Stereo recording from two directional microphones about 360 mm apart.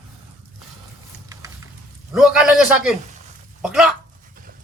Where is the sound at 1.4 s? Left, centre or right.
Centre.